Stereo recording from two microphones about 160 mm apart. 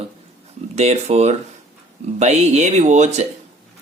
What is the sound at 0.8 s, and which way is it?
Speech, 45° right (ahead or behind).